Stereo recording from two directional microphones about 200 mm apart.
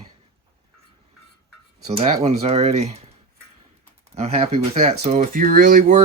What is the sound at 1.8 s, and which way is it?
Speech, 30° right (ahead or behind).